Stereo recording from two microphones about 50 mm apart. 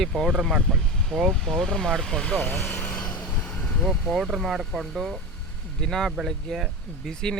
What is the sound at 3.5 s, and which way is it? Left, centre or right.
Vehicle, centre.